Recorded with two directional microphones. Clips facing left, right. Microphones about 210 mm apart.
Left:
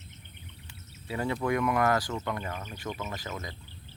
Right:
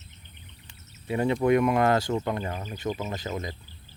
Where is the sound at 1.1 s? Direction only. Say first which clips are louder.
Right 7 dB; 20° right (ahead or behind).